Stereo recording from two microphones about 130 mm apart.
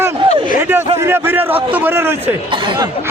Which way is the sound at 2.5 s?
40° right (ahead or behind).